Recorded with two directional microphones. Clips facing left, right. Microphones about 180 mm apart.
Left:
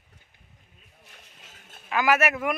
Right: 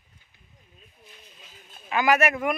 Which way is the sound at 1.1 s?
70° left (ahead or behind).